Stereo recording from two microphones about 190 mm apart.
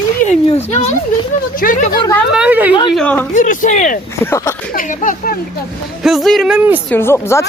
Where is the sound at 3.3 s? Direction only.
40° left (ahead or behind).